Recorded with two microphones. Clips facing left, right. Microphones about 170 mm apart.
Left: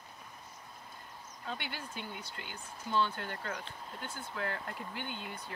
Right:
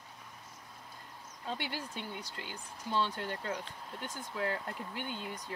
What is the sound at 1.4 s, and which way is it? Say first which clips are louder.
Speech: right 3 dB; 35° right (ahead or behind).